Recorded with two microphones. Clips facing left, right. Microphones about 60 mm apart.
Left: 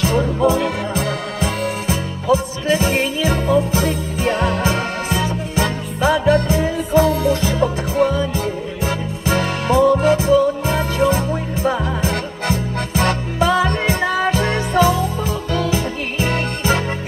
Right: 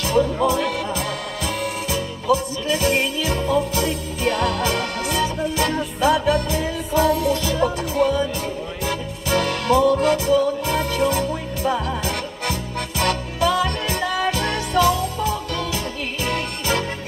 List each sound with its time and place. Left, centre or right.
0.0 s music: left